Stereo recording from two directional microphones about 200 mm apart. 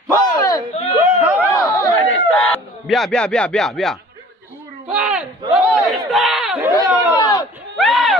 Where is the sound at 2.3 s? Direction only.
5° left (ahead or behind).